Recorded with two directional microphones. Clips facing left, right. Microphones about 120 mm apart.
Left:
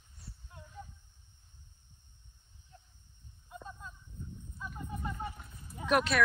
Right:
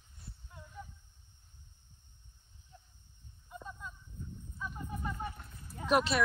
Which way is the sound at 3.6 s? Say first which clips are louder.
Right 3 dB; 25° left (ahead or behind).